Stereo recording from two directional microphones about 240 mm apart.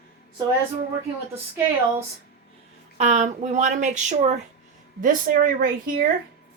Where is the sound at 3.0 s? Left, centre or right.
Right.